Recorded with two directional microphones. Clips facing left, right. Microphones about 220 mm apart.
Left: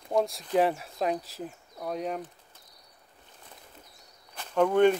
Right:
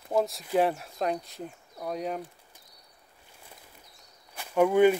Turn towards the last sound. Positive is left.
turn(degrees=-10)  # may be behind; listen again after turning